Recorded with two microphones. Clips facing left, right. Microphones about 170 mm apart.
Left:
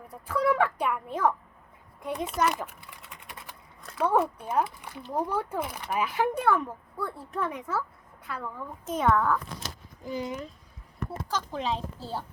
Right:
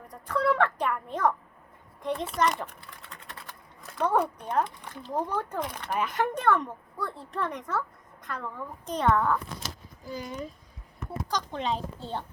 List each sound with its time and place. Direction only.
0.1 s a child's voice: 10° left (ahead or behind)
3.2 s typewriter: 15° left (ahead or behind)
3.8 s speech: centre (ahead or behind)
10.0 s speech: 20° left (ahead or behind)
11.3 s speech: 5° left (ahead or behind)